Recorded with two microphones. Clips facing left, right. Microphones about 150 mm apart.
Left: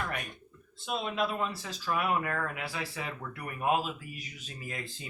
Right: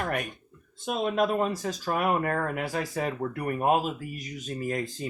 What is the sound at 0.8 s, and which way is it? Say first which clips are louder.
Speech: right 6 dB; 50° right (ahead or behind).